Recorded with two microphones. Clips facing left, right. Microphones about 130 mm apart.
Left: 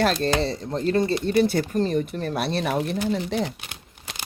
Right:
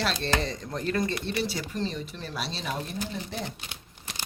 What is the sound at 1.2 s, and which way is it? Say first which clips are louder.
Speech: left 10 dB; 45° left (ahead or behind).